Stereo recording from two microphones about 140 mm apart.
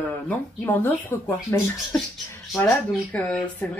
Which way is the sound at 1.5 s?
20° left (ahead or behind).